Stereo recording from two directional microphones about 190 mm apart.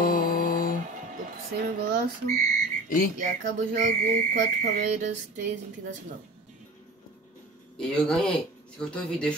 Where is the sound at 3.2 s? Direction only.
45° right (ahead or behind).